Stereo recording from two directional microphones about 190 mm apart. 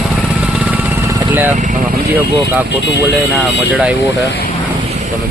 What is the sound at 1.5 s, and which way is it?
Speech, 40° right (ahead or behind).